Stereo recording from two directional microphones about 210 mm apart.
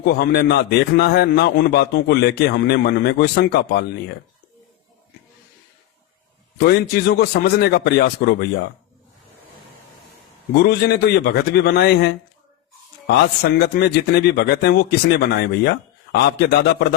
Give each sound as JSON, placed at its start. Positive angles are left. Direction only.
{"t": 0.0, "sound": "a man's voice", "side_deg": 50}
{"t": 6.7, "sound": "a man's voice", "side_deg": 50}
{"t": 10.6, "sound": "a man's voice", "side_deg": 50}